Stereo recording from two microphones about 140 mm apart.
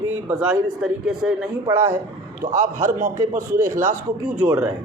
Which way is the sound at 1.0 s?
5° right (ahead or behind).